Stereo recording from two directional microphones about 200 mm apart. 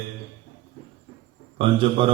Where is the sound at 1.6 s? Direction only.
25° right (ahead or behind).